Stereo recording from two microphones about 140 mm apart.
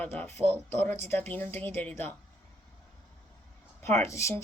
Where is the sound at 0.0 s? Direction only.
15° left (ahead or behind).